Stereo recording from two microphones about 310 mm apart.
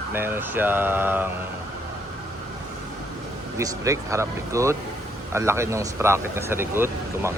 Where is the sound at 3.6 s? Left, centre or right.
Centre.